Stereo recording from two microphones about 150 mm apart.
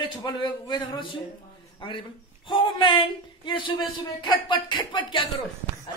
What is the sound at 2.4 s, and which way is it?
A man's voice, 35° left (ahead or behind).